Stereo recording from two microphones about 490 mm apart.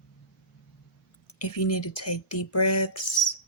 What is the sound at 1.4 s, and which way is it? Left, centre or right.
Speech, left.